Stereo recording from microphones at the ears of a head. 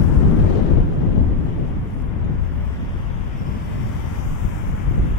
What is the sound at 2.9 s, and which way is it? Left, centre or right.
Vehicle, left.